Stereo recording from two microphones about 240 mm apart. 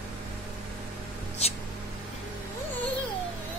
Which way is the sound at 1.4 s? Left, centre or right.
Left.